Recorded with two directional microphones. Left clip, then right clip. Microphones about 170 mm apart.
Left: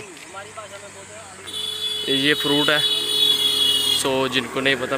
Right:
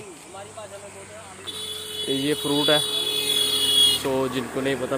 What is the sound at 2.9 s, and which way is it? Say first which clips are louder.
Vehicle: left 5 dB; 45° left (ahead or behind).